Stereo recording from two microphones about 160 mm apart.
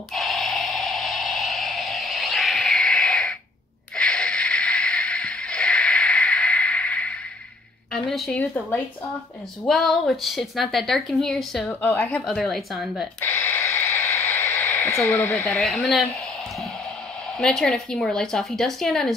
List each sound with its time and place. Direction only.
0.1 s a sound: centre (ahead or behind)
7.9 s a woman's voice: 5° left (ahead or behind)
12.3 s a woman's voice: centre (ahead or behind)
13.2 s radio: 10° left (ahead or behind)
15.5 s a woman's voice: centre (ahead or behind)
17.4 s a woman's voice: 5° left (ahead or behind)